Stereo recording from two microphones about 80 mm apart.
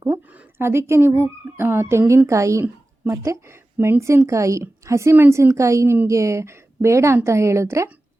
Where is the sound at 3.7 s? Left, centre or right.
Right.